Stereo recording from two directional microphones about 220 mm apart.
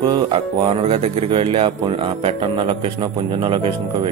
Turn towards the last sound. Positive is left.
turn(degrees=-25)  # may be behind; listen again after turning